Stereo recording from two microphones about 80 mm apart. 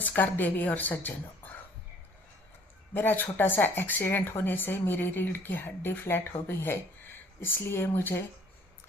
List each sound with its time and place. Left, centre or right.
0.2 s speech: left
2.9 s speech: left